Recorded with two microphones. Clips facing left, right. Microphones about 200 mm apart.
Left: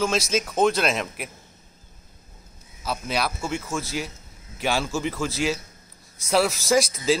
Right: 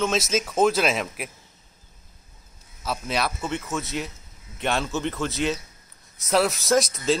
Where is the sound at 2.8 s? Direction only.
Centre (ahead or behind).